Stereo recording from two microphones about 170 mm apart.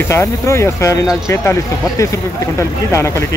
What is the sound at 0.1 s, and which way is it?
Speech, 15° left (ahead or behind).